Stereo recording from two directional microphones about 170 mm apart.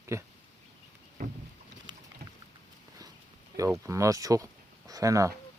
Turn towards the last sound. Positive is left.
turn(degrees=-20)  # may be behind; listen again after turning